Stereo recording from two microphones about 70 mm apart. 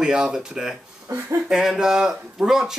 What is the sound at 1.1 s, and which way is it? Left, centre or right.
Speech, right.